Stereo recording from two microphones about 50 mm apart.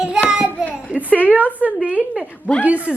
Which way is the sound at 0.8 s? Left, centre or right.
Right.